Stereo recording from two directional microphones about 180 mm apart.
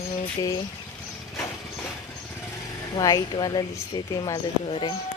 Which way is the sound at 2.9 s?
20° left (ahead or behind).